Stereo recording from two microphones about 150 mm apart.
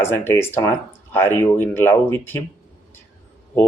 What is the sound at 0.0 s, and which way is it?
Speech, 15° left (ahead or behind).